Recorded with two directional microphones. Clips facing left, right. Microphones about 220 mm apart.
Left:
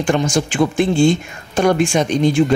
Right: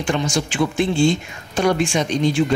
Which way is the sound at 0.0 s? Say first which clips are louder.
Left 4 dB; 50° left (ahead or behind).